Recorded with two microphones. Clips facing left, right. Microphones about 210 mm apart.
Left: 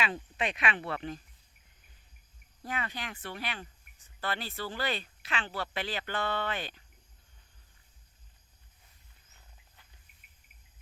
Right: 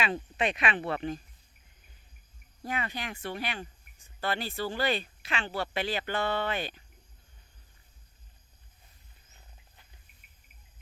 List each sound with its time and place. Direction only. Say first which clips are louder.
0.0 s speech: right 3 dB; 25° right (ahead or behind)
2.6 s speech: right 3 dB; 15° right (ahead or behind)